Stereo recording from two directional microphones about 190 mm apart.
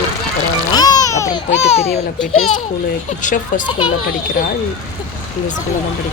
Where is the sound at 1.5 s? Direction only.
35° left (ahead or behind).